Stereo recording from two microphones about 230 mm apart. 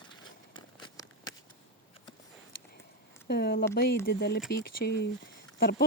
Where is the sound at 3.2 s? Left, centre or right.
Left.